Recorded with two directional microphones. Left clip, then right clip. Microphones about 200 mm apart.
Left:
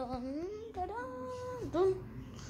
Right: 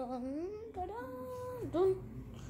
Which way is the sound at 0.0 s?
15° right (ahead or behind).